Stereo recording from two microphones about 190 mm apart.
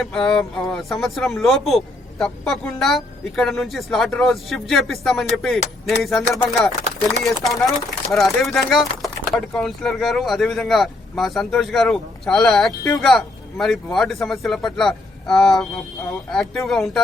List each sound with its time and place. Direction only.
0.0 s speech: 5° left (ahead or behind)
12.8 s speech: 15° left (ahead or behind)
13.1 s speech: centre (ahead or behind)